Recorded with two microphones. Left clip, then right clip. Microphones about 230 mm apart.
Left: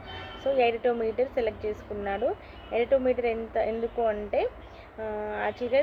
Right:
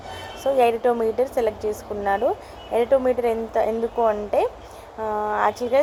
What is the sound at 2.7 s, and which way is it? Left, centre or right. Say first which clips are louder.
Speech: right 5 dB; right.